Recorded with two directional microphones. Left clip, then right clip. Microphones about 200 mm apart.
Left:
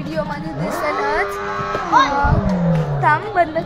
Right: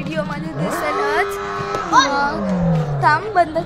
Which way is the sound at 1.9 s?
15° right (ahead or behind).